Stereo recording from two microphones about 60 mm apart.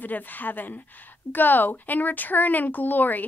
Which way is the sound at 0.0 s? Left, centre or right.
Left.